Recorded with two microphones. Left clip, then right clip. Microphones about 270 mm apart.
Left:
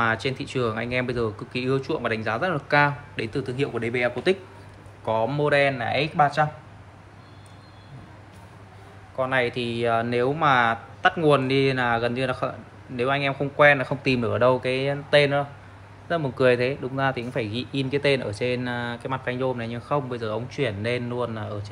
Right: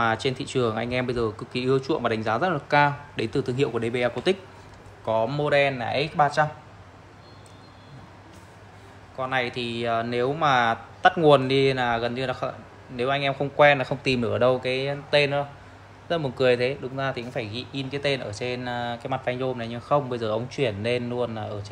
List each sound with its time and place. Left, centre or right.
0.0 s speech: centre
9.1 s speech: centre